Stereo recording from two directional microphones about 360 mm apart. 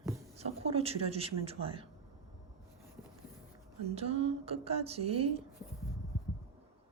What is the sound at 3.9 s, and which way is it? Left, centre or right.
Speech, centre.